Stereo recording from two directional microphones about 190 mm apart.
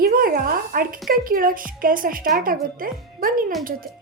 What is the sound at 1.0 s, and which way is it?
Speech, 50° right (ahead or behind).